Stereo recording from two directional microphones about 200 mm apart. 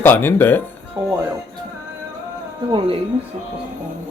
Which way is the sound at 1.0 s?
15° right (ahead or behind).